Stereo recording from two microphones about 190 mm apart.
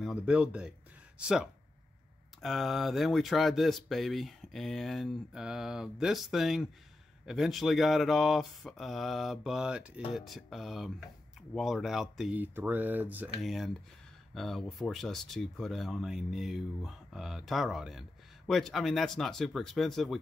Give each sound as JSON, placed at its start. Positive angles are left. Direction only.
{"t": 0.0, "sound": "speech", "side_deg": -5}